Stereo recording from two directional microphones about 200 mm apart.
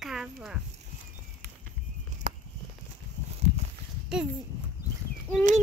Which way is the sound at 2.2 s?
35° right (ahead or behind).